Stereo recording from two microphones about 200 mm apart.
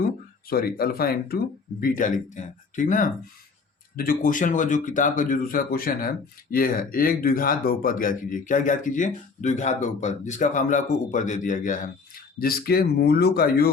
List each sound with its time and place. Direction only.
0.4 s speech: 50° left (ahead or behind)